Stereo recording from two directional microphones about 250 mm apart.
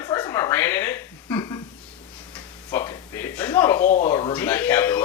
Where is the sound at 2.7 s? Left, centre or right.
Centre.